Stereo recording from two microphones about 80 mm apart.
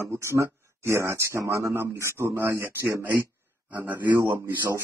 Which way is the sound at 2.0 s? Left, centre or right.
Right.